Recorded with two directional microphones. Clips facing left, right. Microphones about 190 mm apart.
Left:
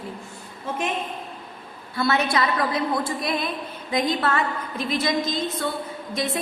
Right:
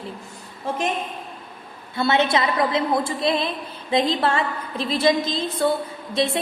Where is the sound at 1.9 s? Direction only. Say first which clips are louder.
Right 2 dB; 25° right (ahead or behind).